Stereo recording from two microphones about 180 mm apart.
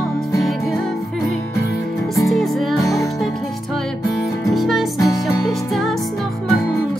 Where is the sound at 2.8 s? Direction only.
15° left (ahead or behind).